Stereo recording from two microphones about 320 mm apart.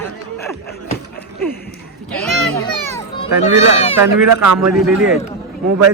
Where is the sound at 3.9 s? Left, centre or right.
Right.